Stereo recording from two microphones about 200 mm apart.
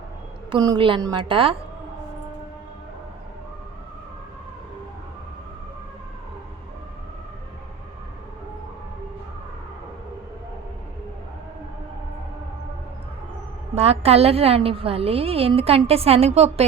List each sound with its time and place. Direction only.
0.5 s a woman's voice: 25° right (ahead or behind)
13.7 s a woman's voice: 30° right (ahead or behind)